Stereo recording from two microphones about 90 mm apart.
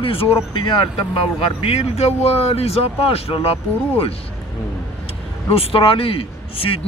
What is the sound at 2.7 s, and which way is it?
A man's voice, 90° left.